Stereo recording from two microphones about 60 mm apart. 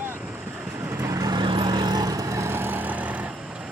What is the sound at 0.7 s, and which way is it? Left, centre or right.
Vehicle, right.